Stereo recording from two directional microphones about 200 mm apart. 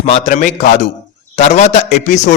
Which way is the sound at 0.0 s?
35° left (ahead or behind).